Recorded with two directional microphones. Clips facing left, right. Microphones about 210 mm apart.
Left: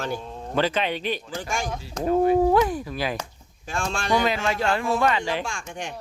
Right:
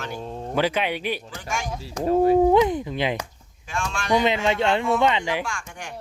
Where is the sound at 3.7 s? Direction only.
35° left (ahead or behind).